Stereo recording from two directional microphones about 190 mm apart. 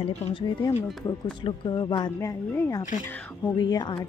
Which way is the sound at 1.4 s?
25° left (ahead or behind).